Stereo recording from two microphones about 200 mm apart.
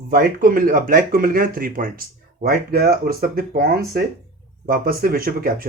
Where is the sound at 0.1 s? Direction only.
45° right (ahead or behind).